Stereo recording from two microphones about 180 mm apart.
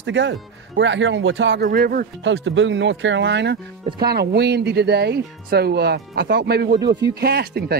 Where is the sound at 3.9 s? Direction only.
65° right (ahead or behind).